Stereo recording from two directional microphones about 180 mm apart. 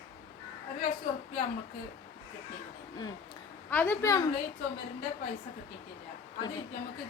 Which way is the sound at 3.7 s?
10° left (ahead or behind).